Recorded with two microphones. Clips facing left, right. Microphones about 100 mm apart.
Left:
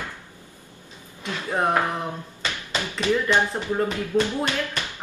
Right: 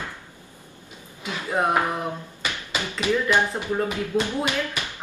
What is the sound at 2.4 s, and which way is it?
Tap, 15° right (ahead or behind).